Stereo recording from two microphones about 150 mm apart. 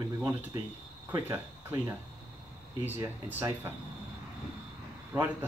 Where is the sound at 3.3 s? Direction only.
15° right (ahead or behind).